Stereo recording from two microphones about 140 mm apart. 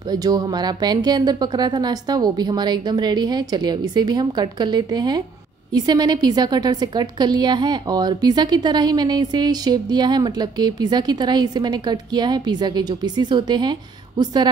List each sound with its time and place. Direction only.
0.1 s a woman's voice: 30° right (ahead or behind)